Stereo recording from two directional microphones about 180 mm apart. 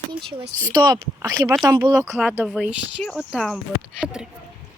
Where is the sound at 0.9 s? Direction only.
15° right (ahead or behind).